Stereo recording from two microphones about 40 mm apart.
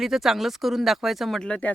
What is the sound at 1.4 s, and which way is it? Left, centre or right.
Speech, left.